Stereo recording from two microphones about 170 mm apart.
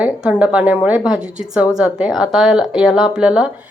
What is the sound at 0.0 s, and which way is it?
Speech, 5° right (ahead or behind).